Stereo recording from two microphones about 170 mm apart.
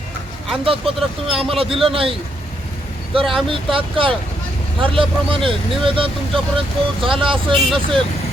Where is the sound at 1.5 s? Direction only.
35° right (ahead or behind).